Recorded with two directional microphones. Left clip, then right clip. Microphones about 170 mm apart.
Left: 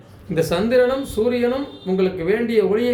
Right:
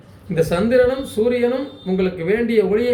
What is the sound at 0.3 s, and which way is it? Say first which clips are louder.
Speech: right 2 dB; 5° left (ahead or behind).